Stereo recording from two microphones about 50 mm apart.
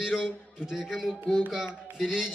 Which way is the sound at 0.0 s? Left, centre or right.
Centre.